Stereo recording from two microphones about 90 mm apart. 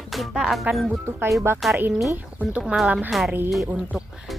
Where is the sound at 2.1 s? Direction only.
15° right (ahead or behind).